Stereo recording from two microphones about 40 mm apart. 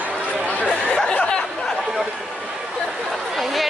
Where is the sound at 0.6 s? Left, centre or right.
Left.